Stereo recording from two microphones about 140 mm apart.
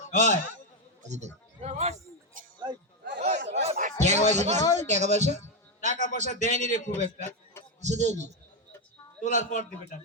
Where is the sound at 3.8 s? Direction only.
55° right (ahead or behind).